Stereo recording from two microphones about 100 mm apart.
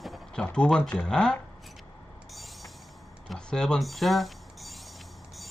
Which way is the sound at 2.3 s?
Centre (ahead or behind).